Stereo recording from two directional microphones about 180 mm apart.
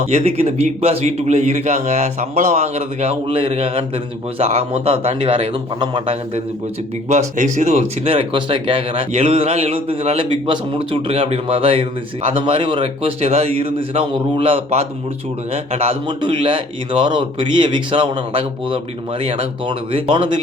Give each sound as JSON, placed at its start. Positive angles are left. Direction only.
{"t": 0.0, "sound": "speech", "side_deg": -35}
{"t": 7.1, "sound": "a man's voice", "side_deg": -40}